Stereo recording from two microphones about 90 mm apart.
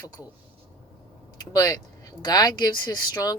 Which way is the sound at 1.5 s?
40° left (ahead or behind).